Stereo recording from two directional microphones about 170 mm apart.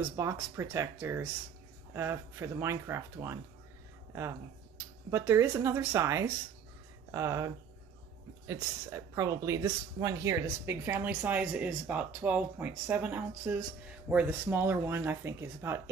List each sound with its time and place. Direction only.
0.1 s speech: 15° right (ahead or behind)